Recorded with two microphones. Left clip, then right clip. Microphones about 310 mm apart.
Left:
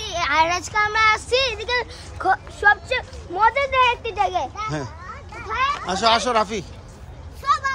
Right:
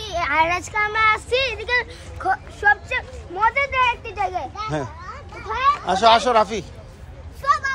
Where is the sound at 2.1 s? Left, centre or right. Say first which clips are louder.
Left 2 dB; left.